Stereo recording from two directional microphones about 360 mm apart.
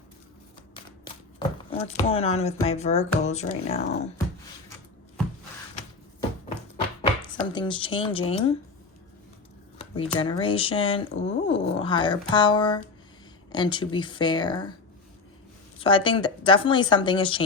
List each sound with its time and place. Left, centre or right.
1.0 s speech: centre
7.2 s speech: centre
9.7 s speech: centre
15.8 s speech: centre